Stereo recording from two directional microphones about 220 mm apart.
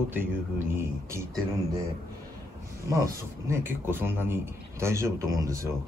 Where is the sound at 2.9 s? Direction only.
15° right (ahead or behind).